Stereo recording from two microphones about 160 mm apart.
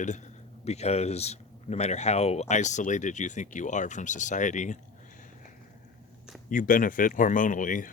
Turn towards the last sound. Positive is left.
turn(degrees=55)  # may be behind; listen again after turning